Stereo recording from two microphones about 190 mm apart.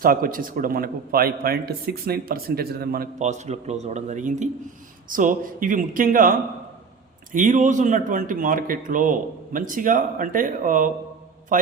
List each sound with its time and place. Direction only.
0.0 s speech: 50° right (ahead or behind)
3.2 s speech: 35° right (ahead or behind)
7.3 s speech: 40° right (ahead or behind)